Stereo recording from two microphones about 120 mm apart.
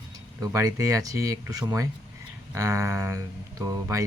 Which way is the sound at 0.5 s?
25° right (ahead or behind).